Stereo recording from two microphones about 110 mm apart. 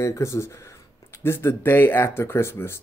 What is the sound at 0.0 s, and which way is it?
Speech, 25° left (ahead or behind).